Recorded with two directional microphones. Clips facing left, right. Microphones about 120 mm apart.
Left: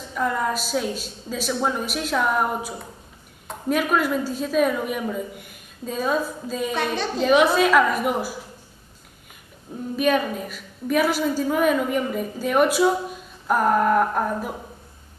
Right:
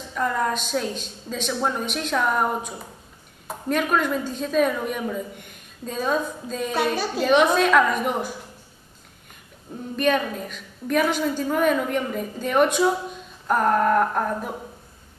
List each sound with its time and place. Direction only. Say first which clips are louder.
0.1 s a woman's voice: even; centre (ahead or behind)
9.9 s a woman's voice: left 1 dB; 5° left (ahead or behind)